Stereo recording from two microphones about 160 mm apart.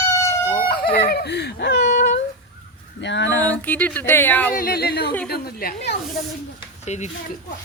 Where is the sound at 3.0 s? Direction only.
90° left.